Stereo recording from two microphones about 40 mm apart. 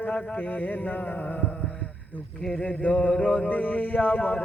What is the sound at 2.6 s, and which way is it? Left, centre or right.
Mantra, left.